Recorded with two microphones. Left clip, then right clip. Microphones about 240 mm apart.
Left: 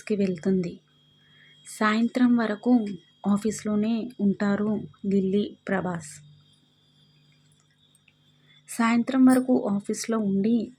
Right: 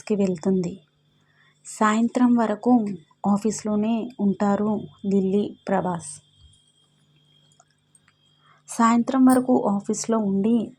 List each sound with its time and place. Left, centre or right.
0.0 s speech: centre
8.6 s speech: centre